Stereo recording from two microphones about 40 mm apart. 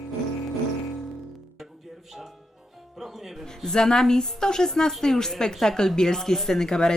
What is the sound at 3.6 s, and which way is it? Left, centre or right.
Speech, centre.